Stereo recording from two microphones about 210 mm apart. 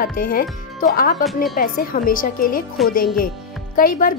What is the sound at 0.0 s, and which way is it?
Speech, 40° left (ahead or behind).